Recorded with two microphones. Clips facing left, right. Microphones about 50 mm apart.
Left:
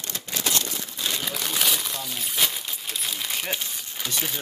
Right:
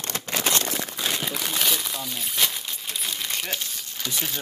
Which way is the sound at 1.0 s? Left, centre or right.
Centre.